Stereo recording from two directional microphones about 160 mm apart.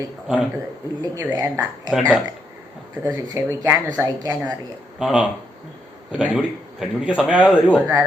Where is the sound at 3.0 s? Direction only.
20° right (ahead or behind).